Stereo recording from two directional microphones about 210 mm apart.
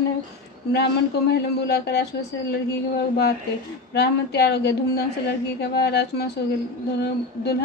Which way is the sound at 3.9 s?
50° left (ahead or behind).